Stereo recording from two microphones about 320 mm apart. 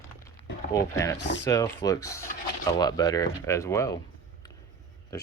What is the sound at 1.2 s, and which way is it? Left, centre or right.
Speech, left.